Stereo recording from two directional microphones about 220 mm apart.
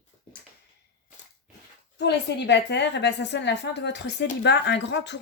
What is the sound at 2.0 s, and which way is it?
Speech, 50° left (ahead or behind).